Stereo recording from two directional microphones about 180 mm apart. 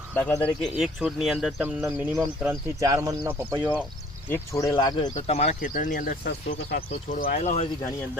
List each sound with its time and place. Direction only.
0.1 s speech: 10° left (ahead or behind)
1.8 s speech: 10° right (ahead or behind)
4.3 s speech: 15° left (ahead or behind)
5.1 s speech: 35° left (ahead or behind)
5.7 s speech: 50° left (ahead or behind)